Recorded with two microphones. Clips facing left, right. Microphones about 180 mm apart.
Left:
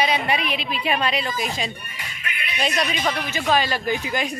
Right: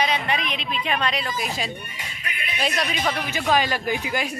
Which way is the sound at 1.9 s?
25° right (ahead or behind).